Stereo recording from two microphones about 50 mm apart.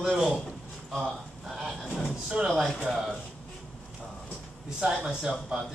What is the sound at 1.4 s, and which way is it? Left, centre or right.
A man's voice, centre.